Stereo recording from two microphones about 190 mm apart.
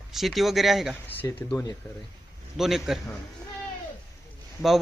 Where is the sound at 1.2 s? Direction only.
10° left (ahead or behind).